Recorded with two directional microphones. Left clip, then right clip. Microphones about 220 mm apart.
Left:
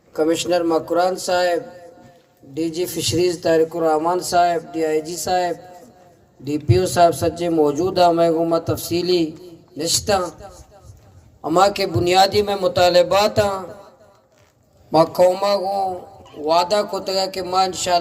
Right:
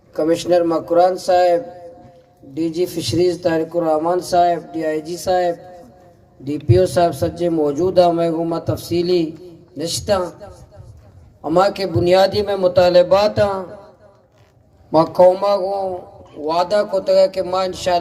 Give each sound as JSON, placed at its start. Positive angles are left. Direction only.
{"t": 0.1, "sound": "a man's voice", "side_deg": 25}
{"t": 14.9, "sound": "speech", "side_deg": 45}